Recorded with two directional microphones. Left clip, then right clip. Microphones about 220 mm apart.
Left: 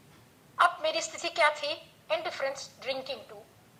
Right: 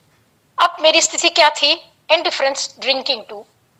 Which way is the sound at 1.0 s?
45° right (ahead or behind).